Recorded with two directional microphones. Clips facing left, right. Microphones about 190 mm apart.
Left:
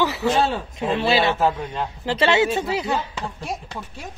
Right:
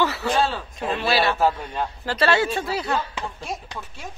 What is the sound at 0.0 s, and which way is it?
A woman's voice, 20° left (ahead or behind).